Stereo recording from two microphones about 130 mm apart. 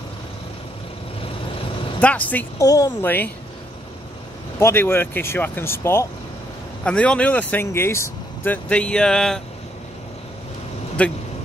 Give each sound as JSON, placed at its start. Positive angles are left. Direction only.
{"t": 2.0, "sound": "speech", "side_deg": 10}
{"t": 2.6, "sound": "speech", "side_deg": 25}
{"t": 4.6, "sound": "speech", "side_deg": 20}
{"t": 6.8, "sound": "speech", "side_deg": 10}
{"t": 11.0, "sound": "speech", "side_deg": 10}